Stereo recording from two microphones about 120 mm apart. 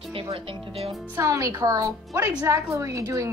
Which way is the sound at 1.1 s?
25° right (ahead or behind).